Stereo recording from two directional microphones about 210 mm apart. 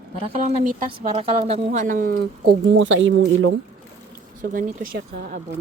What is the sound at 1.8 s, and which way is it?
Speech, 40° right (ahead or behind).